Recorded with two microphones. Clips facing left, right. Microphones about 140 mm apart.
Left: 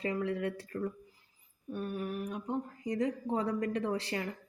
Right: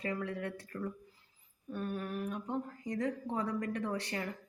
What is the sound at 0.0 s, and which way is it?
Speech, 20° left (ahead or behind).